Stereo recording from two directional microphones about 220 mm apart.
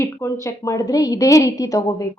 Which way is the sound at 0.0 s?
15° left (ahead or behind).